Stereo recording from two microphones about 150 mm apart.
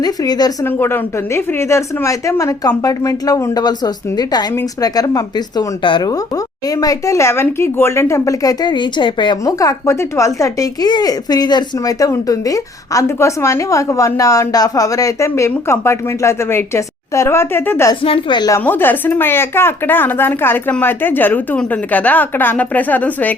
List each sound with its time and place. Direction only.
0.0 s speech: 25° left (ahead or behind)
0.6 s speech: 15° left (ahead or behind)
18.0 s speech: 35° left (ahead or behind)
18.6 s speech: 15° left (ahead or behind)